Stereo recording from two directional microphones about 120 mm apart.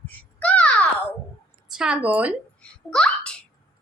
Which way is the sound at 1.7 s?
5° right (ahead or behind).